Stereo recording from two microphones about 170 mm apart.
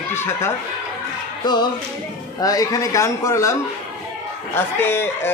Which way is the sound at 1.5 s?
25° left (ahead or behind).